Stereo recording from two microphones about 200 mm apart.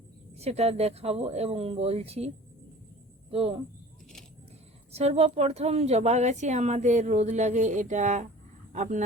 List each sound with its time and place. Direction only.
0.3 s a woman's voice: 30° right (ahead or behind)
4.9 s a woman's voice: 30° right (ahead or behind)